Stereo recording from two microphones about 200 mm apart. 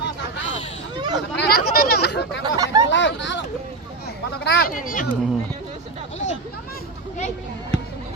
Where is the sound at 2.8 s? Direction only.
65° left (ahead or behind).